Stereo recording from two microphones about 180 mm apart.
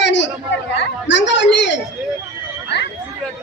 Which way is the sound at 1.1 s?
90° left.